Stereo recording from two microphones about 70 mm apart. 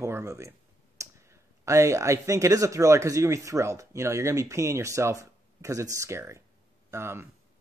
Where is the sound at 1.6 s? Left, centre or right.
Right.